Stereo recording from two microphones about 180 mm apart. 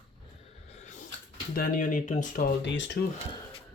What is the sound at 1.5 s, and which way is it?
Speech, 50° left (ahead or behind).